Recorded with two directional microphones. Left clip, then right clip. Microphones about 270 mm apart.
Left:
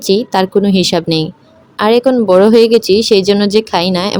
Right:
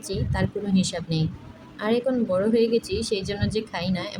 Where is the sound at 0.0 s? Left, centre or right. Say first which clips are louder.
Left 17 dB; left.